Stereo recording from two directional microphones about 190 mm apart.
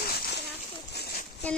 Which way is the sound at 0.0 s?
55° left (ahead or behind).